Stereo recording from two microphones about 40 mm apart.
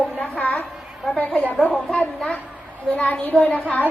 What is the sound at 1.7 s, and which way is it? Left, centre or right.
Speech, left.